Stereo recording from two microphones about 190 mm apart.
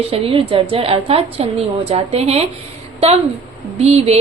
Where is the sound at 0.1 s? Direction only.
30° right (ahead or behind).